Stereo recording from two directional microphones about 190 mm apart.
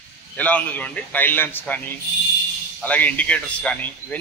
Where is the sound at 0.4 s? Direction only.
5° left (ahead or behind).